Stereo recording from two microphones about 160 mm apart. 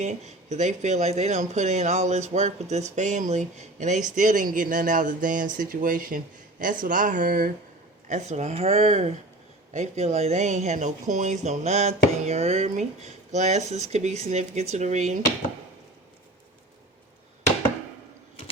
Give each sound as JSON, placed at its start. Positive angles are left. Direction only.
{"t": 0.0, "sound": "speech", "side_deg": -45}
{"t": 8.0, "sound": "speech", "side_deg": -45}